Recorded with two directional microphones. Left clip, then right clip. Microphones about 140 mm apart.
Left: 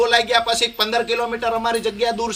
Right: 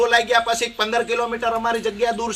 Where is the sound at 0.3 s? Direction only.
15° left (ahead or behind).